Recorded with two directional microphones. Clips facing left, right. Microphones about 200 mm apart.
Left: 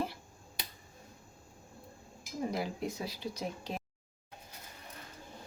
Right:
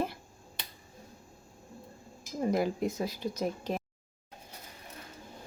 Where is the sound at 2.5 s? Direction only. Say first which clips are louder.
Right 10 dB; 50° right (ahead or behind).